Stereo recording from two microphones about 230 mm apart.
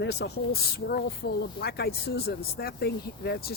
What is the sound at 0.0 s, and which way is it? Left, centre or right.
Speech, left.